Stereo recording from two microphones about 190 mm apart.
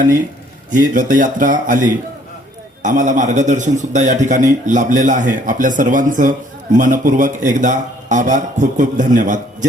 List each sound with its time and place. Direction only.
0.7 s a man's voice: 45° right (ahead or behind)